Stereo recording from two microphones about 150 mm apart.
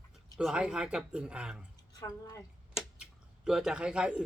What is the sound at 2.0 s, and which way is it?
Speech, 20° left (ahead or behind).